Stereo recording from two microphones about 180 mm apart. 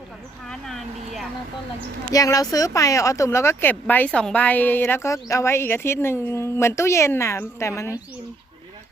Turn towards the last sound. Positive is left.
turn(degrees=15)  # may be behind; listen again after turning